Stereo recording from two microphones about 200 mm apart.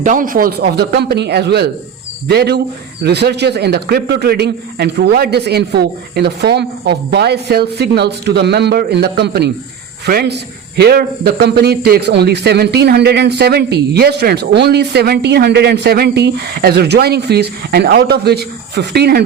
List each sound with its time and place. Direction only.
0.0 s a man's voice: 40° right (ahead or behind)